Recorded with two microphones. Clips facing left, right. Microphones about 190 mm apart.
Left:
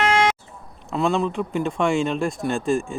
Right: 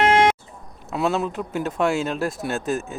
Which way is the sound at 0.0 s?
55° right (ahead or behind).